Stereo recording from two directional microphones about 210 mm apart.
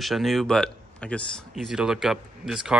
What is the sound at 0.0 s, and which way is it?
Speech, centre (ahead or behind).